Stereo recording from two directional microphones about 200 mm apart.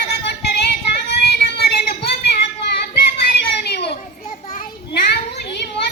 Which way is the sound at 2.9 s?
55° left (ahead or behind).